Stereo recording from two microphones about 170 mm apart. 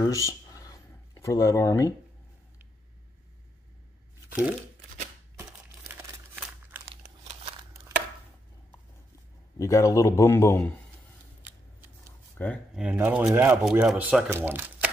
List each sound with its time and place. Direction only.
0.0 s a sound: 20° left (ahead or behind)
5.4 s crumpling: 15° right (ahead or behind)
9.6 s a man's voice: 20° left (ahead or behind)
12.4 s speech: 10° left (ahead or behind)
12.7 s speech: 10° right (ahead or behind)